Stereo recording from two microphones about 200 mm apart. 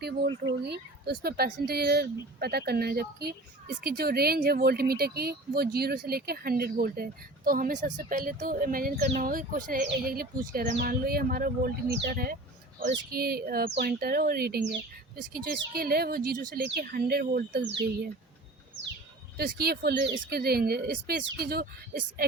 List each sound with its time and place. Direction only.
0.0 s speech: 55° right (ahead or behind)
19.4 s speech: 50° right (ahead or behind)